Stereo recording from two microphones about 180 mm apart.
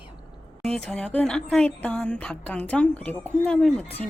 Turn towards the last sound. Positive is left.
turn(degrees=5)  # may be behind; listen again after turning